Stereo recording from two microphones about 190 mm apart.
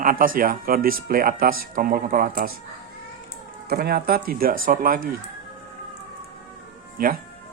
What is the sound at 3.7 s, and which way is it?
Speech, 55° right (ahead or behind).